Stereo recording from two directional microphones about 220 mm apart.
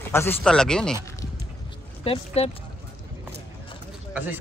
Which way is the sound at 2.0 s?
25° left (ahead or behind).